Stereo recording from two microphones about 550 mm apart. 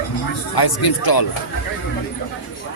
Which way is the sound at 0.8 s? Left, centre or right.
Left.